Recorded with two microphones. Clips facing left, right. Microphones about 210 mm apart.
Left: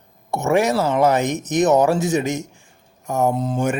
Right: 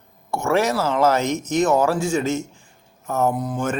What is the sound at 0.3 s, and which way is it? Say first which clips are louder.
Speech: left 2 dB; 20° left (ahead or behind).